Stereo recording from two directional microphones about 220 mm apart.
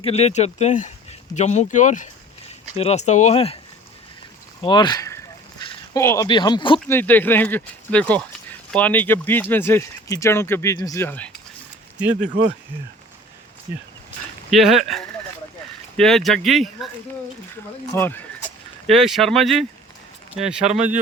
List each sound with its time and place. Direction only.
0.0 s speech: 30° left (ahead or behind)
4.6 s a sound: 20° left (ahead or behind)
6.2 s speech: 20° left (ahead or behind)
6.7 s speech: 10° left (ahead or behind)
11.9 s speech: 5° right (ahead or behind)
14.5 s speech: centre (ahead or behind)
17.9 s speech: 10° left (ahead or behind)
18.9 s speech: centre (ahead or behind)